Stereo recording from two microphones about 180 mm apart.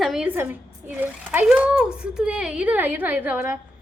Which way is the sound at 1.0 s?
5° right (ahead or behind).